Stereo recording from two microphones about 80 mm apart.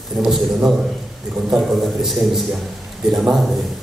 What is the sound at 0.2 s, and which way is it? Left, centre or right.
A man's voice, centre.